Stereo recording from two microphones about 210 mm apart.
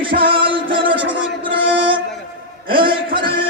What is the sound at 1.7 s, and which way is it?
Music, 25° right (ahead or behind).